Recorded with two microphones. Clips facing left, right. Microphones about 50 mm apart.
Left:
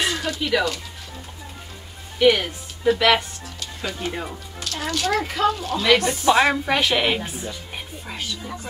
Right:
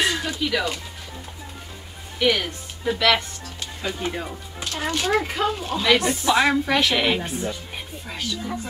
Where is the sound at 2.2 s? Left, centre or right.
Centre.